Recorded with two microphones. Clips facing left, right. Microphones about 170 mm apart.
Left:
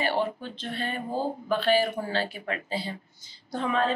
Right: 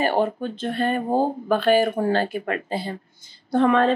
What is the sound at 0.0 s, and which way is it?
Speech, 50° right (ahead or behind).